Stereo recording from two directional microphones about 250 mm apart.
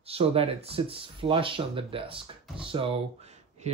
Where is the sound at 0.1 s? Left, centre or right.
Right.